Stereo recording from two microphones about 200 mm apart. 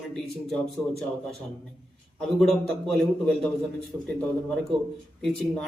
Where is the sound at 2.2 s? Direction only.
Centre (ahead or behind).